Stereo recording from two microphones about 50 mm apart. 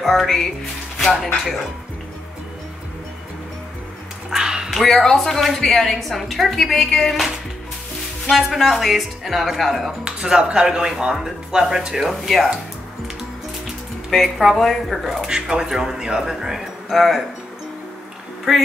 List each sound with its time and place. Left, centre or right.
0.0 s a woman's voice: centre
4.4 s dog: centre
4.8 s a woman's voice: centre
8.3 s a woman's voice: centre
10.0 s speech: centre
12.0 s a woman's voice: centre
14.1 s a woman's voice: centre
15.2 s speech: centre
18.5 s a woman's voice: centre